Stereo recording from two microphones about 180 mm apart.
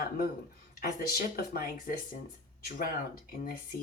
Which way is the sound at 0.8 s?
55° left (ahead or behind).